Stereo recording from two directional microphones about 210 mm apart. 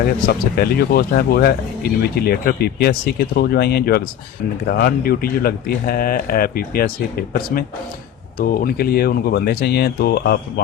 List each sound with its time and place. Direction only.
0.5 s speech: 45° left (ahead or behind)